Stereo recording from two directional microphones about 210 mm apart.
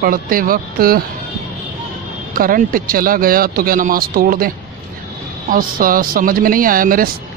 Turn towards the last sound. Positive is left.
turn(degrees=-40)  # may be behind; listen again after turning